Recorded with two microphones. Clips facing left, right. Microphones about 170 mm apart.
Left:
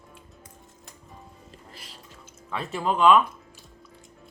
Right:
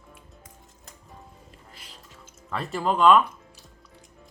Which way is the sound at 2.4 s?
Centre (ahead or behind).